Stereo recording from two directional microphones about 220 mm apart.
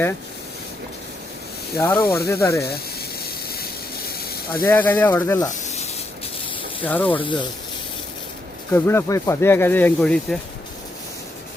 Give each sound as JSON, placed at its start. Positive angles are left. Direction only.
{"t": 1.7, "sound": "speech", "side_deg": 10}
{"t": 4.2, "sound": "hiss", "side_deg": 45}
{"t": 4.6, "sound": "speech", "side_deg": 10}
{"t": 5.5, "sound": "snake", "side_deg": 30}
{"t": 6.8, "sound": "speech", "side_deg": 5}
{"t": 7.2, "sound": "speech", "side_deg": 20}
{"t": 8.7, "sound": "speech", "side_deg": 10}